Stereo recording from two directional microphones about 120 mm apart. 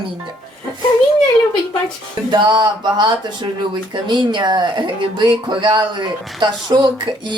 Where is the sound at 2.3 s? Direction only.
40° right (ahead or behind).